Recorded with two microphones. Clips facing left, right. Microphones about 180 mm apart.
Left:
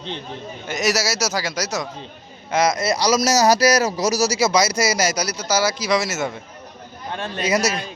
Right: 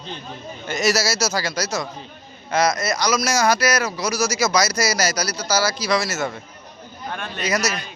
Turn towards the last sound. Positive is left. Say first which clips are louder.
# left 3 dB
turn(degrees=30)  # may be behind; listen again after turning